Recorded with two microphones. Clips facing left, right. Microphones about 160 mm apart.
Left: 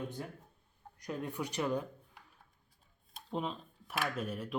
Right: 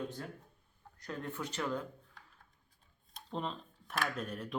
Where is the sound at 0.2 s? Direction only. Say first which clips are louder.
Left 1 dB; 15° left (ahead or behind).